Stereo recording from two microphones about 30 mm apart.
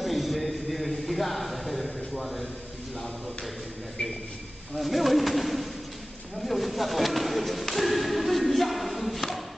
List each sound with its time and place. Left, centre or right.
0.0 s a sound: centre
4.7 s bird: centre
6.4 s thump: centre